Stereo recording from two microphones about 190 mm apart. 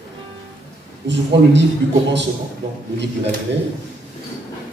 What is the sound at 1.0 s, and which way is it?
Speech, 65° right (ahead or behind).